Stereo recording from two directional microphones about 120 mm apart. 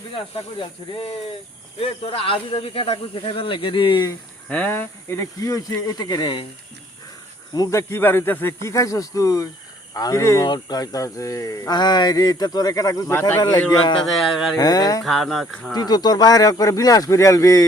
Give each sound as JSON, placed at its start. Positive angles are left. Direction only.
{"t": 0.1, "sound": "speech", "side_deg": 45}
{"t": 4.4, "sound": "speech", "side_deg": 10}
{"t": 7.5, "sound": "speech", "side_deg": 30}
{"t": 8.6, "sound": "speech", "side_deg": 30}
{"t": 13.7, "sound": "speech", "side_deg": 40}
{"t": 14.1, "sound": "speech", "side_deg": 0}
{"t": 14.5, "sound": "speech", "side_deg": 30}
{"t": 15.0, "sound": "speech", "side_deg": 0}
{"t": 15.7, "sound": "speech", "side_deg": 35}